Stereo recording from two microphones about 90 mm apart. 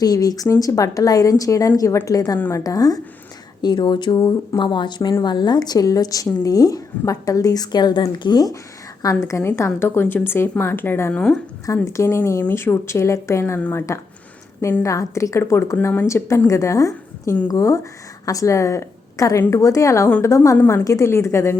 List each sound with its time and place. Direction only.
0.0 s a woman's voice: 45° left (ahead or behind)
3.6 s a woman's voice: 55° left (ahead or behind)
9.0 s a woman's voice: 40° left (ahead or behind)
11.1 s a woman's voice: 10° left (ahead or behind)
11.6 s a woman's voice: 35° left (ahead or behind)